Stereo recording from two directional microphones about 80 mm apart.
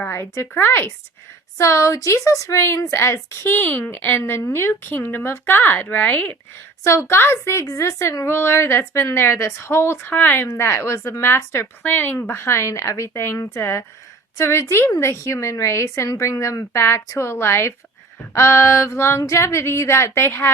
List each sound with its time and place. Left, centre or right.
0.1 s speech: left
1.5 s a woman's voice: left
6.8 s a woman's voice: left